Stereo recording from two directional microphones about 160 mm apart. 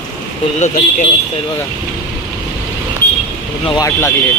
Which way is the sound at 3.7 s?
20° left (ahead or behind).